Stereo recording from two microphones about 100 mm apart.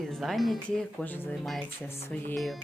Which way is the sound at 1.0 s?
15° left (ahead or behind).